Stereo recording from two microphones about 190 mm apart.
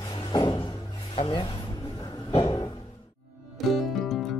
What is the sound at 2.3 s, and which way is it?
Music, 25° left (ahead or behind).